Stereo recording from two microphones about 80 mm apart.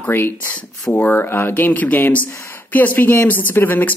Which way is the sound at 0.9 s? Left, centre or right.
Left.